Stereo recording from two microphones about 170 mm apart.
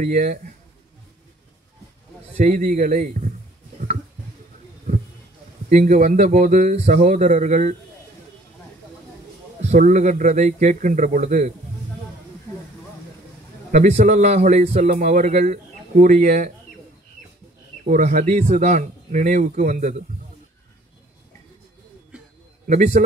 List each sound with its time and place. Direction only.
0.0 s a man's voice: 50° right (ahead or behind)
2.3 s a man's voice: 45° right (ahead or behind)
5.7 s a man's voice: 45° right (ahead or behind)
9.6 s a man's voice: 45° right (ahead or behind)
13.7 s a man's voice: 40° right (ahead or behind)
17.8 s a man's voice: 50° right (ahead or behind)
22.7 s a man's voice: 45° right (ahead or behind)